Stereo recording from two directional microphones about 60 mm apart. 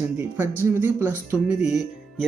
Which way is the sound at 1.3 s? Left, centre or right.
Centre.